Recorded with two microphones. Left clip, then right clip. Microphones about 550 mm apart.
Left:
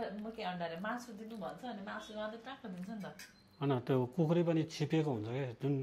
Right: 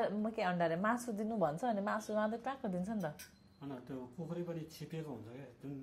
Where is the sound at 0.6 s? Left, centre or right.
Right.